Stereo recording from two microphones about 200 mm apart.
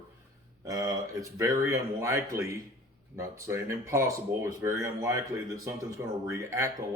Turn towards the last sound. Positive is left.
turn(degrees=-15)  # may be behind; listen again after turning